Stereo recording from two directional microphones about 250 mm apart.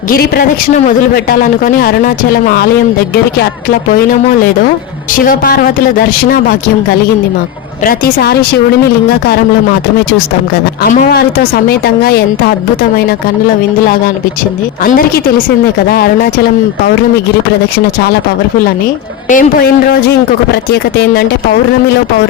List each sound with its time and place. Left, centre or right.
0.1 s speech: left
5.1 s speech: left
7.9 s speech: left
10.8 s speech: left
14.8 s speech: left
19.3 s speech: left